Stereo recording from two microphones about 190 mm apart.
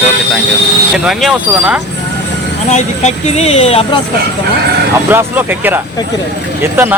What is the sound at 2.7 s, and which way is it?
Speech, 35° left (ahead or behind).